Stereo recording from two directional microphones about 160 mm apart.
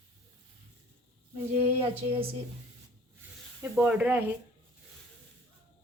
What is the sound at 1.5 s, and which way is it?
Speech, 40° right (ahead or behind).